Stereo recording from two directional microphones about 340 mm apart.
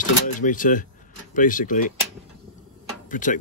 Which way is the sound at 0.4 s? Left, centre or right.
Left.